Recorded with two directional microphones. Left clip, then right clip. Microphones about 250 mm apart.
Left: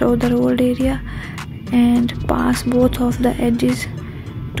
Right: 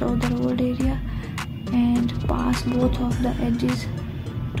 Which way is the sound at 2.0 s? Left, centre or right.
Left.